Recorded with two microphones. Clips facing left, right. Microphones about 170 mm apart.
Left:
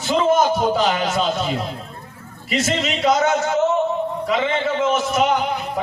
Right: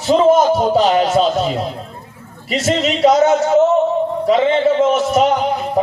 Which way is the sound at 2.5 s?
35° right (ahead or behind).